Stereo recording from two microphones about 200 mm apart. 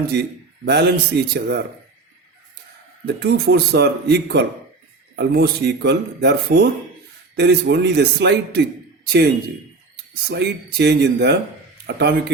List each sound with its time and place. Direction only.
0.1 s speech: 55° right (ahead or behind)
3.1 s speech: 55° right (ahead or behind)
10.2 s speech: 55° right (ahead or behind)